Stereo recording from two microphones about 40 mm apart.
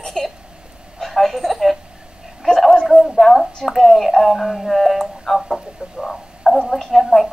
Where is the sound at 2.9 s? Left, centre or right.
Centre.